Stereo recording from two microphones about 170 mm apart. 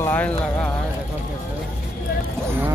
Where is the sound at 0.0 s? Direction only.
10° left (ahead or behind).